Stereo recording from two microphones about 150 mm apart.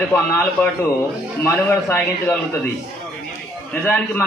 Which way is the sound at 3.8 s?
10° left (ahead or behind).